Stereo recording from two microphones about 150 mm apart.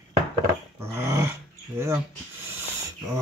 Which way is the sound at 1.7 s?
15° right (ahead or behind).